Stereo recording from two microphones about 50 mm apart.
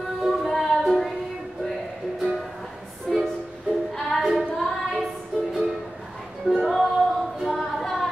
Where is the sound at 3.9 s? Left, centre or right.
Centre.